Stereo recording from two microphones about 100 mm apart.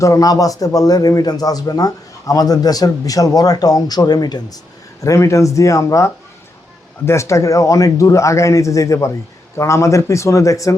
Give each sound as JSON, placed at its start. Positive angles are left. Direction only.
{"t": 0.0, "sound": "a man's voice", "side_deg": 35}